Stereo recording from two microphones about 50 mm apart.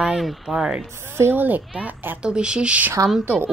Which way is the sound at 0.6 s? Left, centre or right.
Centre.